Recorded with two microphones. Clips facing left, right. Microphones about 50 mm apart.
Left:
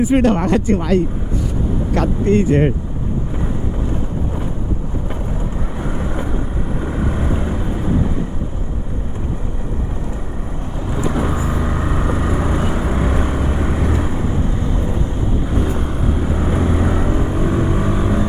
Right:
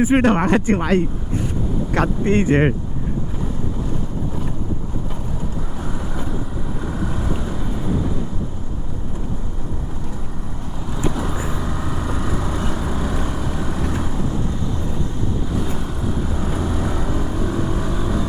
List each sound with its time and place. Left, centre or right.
0.0 s speech: right
6.9 s boat: left
10.9 s vehicle: left